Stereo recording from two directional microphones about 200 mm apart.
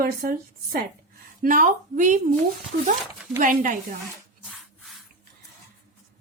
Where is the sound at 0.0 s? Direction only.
45° right (ahead or behind).